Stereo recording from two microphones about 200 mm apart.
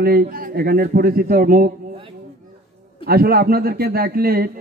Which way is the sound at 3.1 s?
50° right (ahead or behind).